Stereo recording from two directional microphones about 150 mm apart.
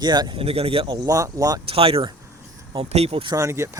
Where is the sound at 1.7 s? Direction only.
40° right (ahead or behind).